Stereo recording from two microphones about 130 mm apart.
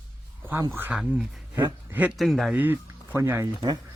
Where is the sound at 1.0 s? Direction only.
Centre (ahead or behind).